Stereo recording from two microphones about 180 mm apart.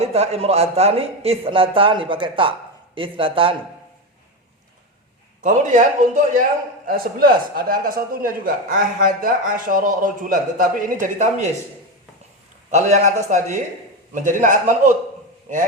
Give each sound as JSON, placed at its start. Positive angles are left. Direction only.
{"t": 0.0, "sound": "a man's voice", "side_deg": -35}
{"t": 5.4, "sound": "a man's voice", "side_deg": -45}
{"t": 12.7, "sound": "a man's voice", "side_deg": -40}